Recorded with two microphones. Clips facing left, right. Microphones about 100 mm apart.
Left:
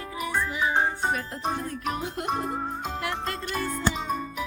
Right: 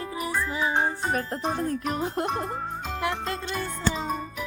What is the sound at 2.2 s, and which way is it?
Music, 10° left (ahead or behind).